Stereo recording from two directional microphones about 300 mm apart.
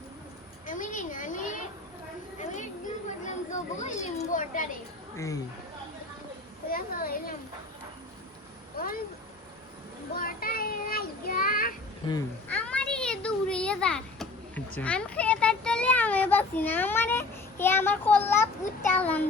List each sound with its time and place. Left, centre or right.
0.7 s children playing: left
2.4 s a sound: left
3.2 s speech: left
5.1 s speech: centre
6.7 s speech: left
8.8 s speech: left
10.2 s child singing: left
12.0 s a sound: centre
14.8 s a child's voice: centre
18.9 s child singing: centre